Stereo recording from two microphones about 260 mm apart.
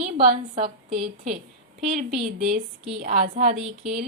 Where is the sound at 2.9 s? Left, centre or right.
Right.